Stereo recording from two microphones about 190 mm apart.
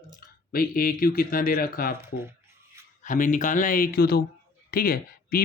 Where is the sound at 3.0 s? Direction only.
45° left (ahead or behind).